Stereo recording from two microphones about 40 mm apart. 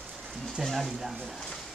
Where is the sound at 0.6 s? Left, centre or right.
Centre.